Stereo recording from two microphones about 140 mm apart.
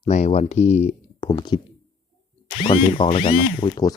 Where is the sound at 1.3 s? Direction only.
35° left (ahead or behind).